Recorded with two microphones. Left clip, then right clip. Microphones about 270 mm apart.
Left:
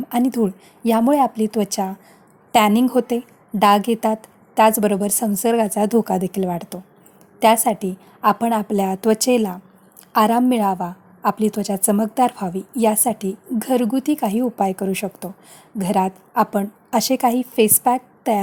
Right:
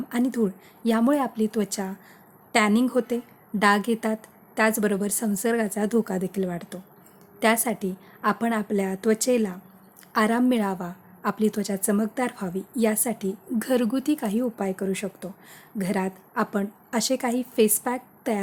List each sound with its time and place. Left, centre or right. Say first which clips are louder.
0.1 s a woman's voice: left 6 dB; centre